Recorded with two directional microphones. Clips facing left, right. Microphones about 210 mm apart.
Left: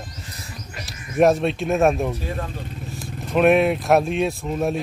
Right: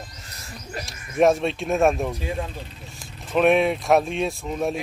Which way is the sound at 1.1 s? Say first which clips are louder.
Left 2 dB; centre (ahead or behind).